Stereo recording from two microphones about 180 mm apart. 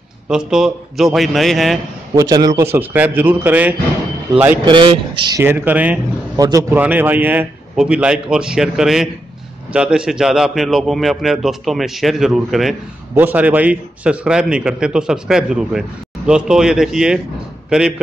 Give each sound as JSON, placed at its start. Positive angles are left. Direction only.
{"t": 0.3, "sound": "a man's voice", "side_deg": -5}
{"t": 2.1, "sound": "a man's voice", "side_deg": -20}
{"t": 4.6, "sound": "a man's voice", "side_deg": -25}
{"t": 5.4, "sound": "a man's voice", "side_deg": -10}
{"t": 6.4, "sound": "a man's voice", "side_deg": -20}